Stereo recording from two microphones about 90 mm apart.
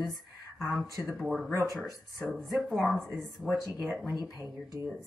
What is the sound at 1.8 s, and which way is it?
Speech, centre (ahead or behind).